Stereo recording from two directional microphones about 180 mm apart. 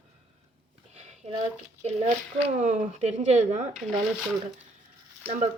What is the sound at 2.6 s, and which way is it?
Speech, 45° right (ahead or behind).